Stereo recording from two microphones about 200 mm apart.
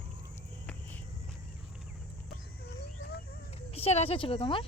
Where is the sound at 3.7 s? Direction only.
30° left (ahead or behind).